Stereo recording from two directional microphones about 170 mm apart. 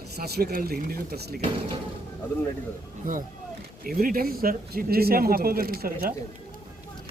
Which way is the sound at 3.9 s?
55° right (ahead or behind).